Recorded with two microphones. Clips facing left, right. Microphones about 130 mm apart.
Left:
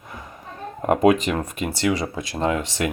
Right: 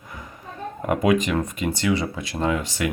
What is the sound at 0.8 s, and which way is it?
Speech, 30° left (ahead or behind).